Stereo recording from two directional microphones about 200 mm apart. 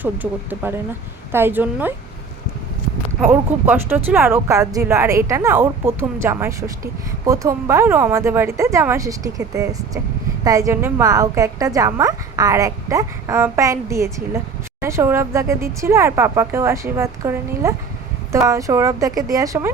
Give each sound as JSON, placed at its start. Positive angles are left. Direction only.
{"t": 0.0, "sound": "a woman's voice", "side_deg": -10}
{"t": 3.2, "sound": "a woman's voice", "side_deg": -10}